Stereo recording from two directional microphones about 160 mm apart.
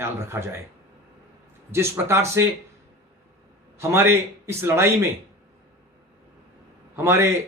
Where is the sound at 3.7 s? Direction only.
15° right (ahead or behind).